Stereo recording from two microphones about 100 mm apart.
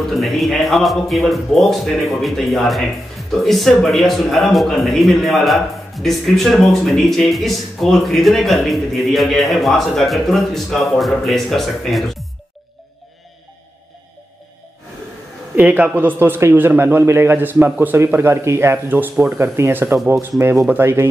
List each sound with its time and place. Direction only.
0.2 s a man's voice: centre (ahead or behind)
15.5 s a man's voice: 15° right (ahead or behind)